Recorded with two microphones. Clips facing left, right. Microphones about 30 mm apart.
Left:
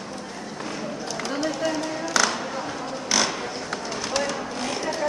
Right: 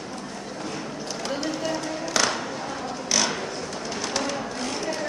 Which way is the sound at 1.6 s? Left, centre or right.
Centre.